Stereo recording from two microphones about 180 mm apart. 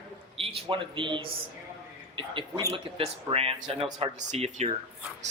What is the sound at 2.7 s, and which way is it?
Speech, 30° right (ahead or behind).